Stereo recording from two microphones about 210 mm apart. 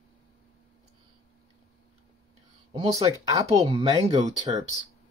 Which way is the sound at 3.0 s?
15° right (ahead or behind).